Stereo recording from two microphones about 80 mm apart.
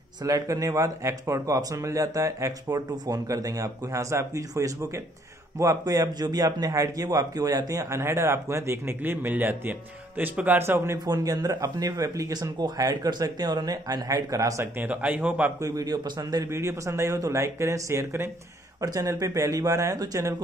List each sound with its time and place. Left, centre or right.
0.2 s a man's voice: right
11.1 s speech: right
14.6 s speech: centre
15.6 s speech: right
16.4 s a man's voice: right